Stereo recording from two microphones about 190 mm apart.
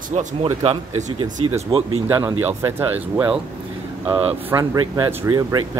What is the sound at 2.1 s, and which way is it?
Speech, 10° right (ahead or behind).